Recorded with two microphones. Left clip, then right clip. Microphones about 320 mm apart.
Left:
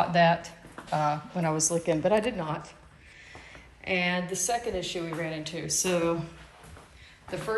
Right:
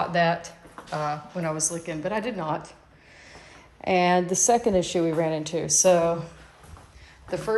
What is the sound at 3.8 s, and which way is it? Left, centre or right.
Speech, centre.